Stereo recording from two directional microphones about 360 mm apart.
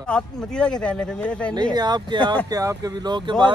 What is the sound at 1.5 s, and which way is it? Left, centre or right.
Speech, centre.